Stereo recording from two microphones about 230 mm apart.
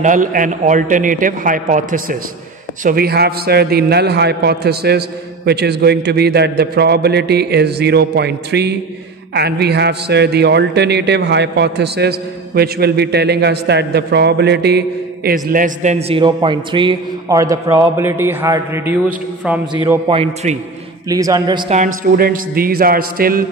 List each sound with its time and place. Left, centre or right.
0.0 s a man's voice: right; by 21.7 s centre
21.7 s a man's voice: right